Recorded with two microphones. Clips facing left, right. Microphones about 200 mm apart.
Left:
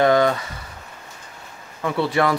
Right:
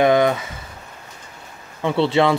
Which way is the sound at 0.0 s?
15° right (ahead or behind).